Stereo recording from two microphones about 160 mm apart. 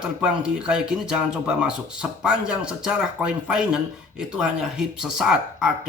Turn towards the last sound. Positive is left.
turn(degrees=-5)  # may be behind; listen again after turning